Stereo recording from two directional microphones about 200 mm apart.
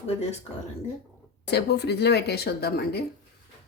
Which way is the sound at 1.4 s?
55° left (ahead or behind).